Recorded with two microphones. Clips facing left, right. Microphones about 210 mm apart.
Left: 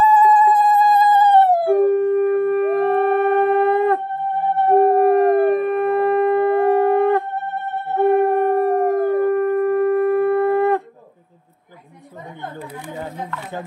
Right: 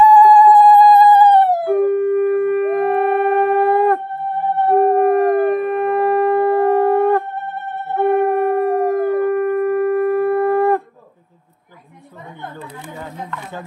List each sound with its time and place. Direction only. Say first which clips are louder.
0.0 s music: right 5 dB; 25° left (ahead or behind)
0.8 s music: right 5 dB; 45° left (ahead or behind)
1.1 s howl: right 2 dB; 25° left (ahead or behind)
4.6 s howl: even; 35° left (ahead or behind)
7.9 s howl: even; 35° left (ahead or behind)